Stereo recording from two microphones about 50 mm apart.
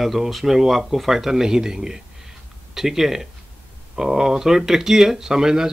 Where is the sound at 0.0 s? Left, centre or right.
Centre.